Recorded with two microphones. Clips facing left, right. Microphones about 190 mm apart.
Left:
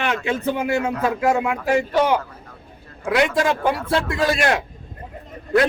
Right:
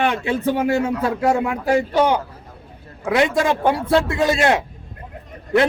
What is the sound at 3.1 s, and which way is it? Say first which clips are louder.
A man's voice: right 1 dB; 25° right (ahead or behind).